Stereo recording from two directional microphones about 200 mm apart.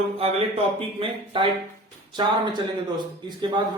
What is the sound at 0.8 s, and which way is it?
Speech, 25° right (ahead or behind).